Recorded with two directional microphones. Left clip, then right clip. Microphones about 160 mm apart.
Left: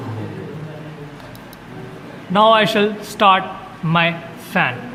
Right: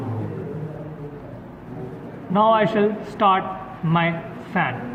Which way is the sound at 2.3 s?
55° left (ahead or behind).